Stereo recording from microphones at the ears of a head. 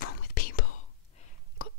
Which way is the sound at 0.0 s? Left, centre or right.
Left.